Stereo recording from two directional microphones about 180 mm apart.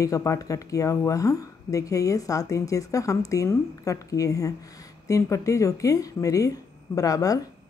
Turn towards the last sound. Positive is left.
turn(degrees=20)  # may be behind; listen again after turning